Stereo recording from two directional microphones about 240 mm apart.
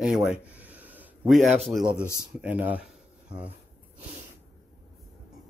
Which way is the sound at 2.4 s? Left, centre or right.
Centre.